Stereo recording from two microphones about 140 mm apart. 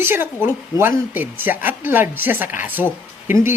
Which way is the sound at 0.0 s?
15° right (ahead or behind).